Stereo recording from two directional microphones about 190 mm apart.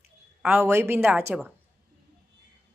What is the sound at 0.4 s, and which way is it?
Speech, 10° right (ahead or behind).